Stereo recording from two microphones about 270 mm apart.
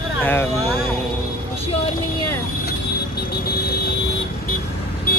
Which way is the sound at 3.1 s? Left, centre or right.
Left.